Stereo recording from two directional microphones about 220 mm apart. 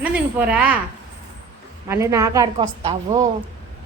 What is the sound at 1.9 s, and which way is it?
A woman's voice, 15° right (ahead or behind).